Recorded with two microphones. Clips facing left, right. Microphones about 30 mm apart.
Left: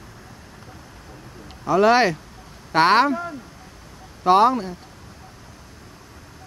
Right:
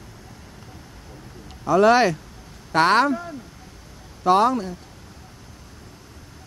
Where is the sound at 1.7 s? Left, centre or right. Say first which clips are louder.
Even; centre.